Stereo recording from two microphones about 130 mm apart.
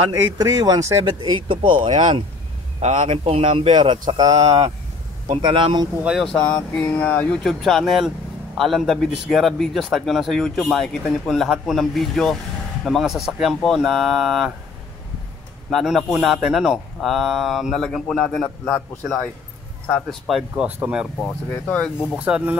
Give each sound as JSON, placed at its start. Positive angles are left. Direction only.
{"t": 0.1, "sound": "speech", "side_deg": -25}
{"t": 1.0, "sound": "speech", "side_deg": -35}
{"t": 2.8, "sound": "speech", "side_deg": -60}
{"t": 6.2, "sound": "speech", "side_deg": 10}
{"t": 15.7, "sound": "speech", "side_deg": 0}
{"t": 21.2, "sound": "speech", "side_deg": 10}
{"t": 22.1, "sound": "speech", "side_deg": -10}